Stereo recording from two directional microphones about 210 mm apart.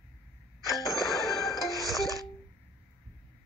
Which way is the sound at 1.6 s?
15° left (ahead or behind).